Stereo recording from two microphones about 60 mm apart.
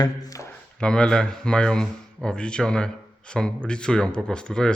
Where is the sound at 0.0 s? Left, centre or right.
Left.